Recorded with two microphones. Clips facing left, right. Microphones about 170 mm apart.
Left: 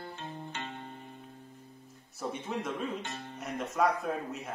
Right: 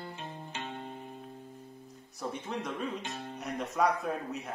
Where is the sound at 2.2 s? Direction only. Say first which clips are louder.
Left 1 dB; 5° left (ahead or behind).